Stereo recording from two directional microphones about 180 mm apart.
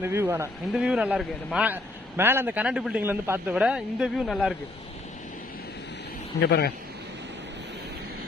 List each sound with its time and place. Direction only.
0.0 s speech: 15° right (ahead or behind)
0.7 s a man's voice: 5° right (ahead or behind)
6.4 s a man's voice: 65° left (ahead or behind)